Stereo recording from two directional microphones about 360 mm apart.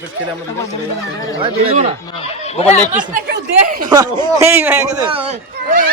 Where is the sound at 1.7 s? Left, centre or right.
Centre.